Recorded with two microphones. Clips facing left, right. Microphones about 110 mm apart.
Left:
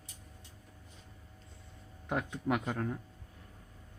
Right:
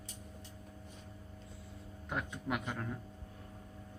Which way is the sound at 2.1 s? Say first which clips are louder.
Left 5 dB; 50° left (ahead or behind).